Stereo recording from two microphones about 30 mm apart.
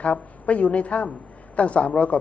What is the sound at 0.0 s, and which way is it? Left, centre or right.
A man's voice, left.